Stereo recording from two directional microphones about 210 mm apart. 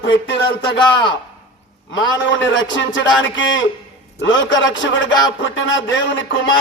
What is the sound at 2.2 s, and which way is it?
Speech, 60° left (ahead or behind).